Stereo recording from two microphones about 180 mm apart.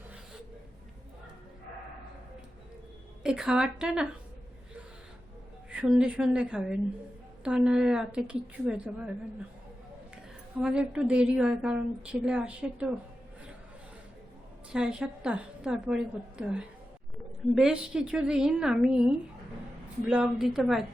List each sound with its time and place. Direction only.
3.2 s a woman's voice: 5° right (ahead or behind)
5.7 s a woman's voice: 5° right (ahead or behind)
10.6 s a woman's voice: 5° right (ahead or behind)
14.7 s a woman's voice: 5° right (ahead or behind)